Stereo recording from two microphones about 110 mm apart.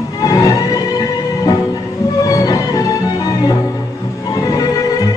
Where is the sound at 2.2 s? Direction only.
30° left (ahead or behind).